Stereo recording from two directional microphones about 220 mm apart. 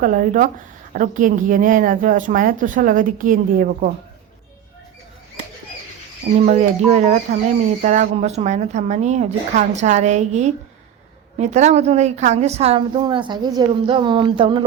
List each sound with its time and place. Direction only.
0.0 s speech: 40° right (ahead or behind)
6.4 s a woman's voice: 30° right (ahead or behind)